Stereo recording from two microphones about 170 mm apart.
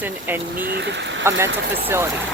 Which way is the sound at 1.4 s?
15° right (ahead or behind).